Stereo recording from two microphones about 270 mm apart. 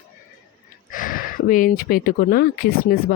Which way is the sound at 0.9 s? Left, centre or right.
Left.